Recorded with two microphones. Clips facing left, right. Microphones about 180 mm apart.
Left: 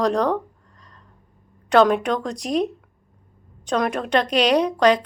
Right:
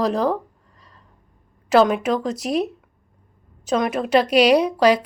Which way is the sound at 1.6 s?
5° right (ahead or behind).